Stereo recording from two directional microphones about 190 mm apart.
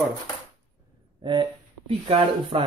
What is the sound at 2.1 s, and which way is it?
Speech, 25° right (ahead or behind).